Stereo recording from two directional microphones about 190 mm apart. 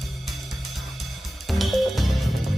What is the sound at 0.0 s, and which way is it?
Music, centre (ahead or behind).